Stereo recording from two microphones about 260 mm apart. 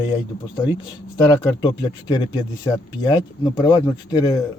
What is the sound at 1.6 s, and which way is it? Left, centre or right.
Speech, centre.